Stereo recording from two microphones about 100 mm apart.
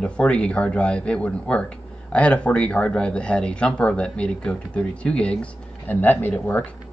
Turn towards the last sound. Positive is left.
turn(degrees=15)  # may be behind; listen again after turning